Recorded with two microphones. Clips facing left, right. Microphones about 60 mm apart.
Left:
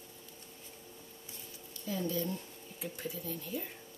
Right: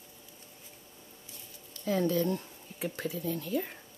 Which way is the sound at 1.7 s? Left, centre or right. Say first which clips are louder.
Right 8 dB; right.